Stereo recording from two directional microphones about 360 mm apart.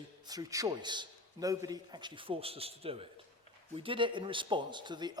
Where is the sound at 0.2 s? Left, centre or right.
Centre.